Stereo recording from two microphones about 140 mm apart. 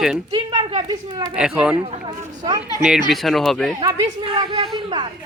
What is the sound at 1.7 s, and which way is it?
Speech, 45° right (ahead or behind).